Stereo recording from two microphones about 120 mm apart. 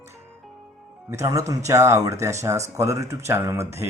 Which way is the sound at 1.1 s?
25° right (ahead or behind).